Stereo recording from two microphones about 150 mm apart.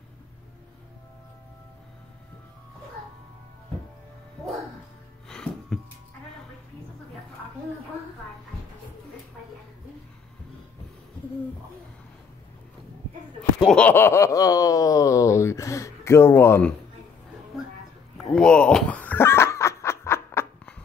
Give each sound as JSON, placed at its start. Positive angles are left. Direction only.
{"t": 5.3, "sound": "music", "side_deg": 5}
{"t": 13.7, "sound": "a sound", "side_deg": 10}
{"t": 18.3, "sound": "snicker", "side_deg": 5}